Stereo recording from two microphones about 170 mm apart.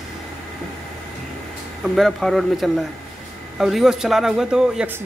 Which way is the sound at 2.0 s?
Centre (ahead or behind).